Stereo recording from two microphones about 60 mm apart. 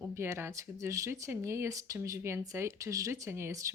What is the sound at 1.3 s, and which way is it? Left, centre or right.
Speech, right.